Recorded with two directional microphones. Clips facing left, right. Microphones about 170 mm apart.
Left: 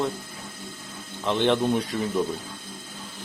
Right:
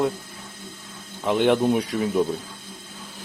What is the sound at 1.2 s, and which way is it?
Speech, 10° right (ahead or behind).